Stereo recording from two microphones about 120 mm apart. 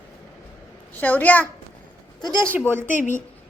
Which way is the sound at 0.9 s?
15° left (ahead or behind).